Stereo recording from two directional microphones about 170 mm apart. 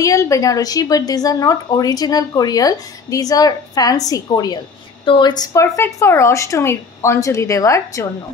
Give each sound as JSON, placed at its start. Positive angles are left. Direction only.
{"t": 0.0, "sound": "speech", "side_deg": 20}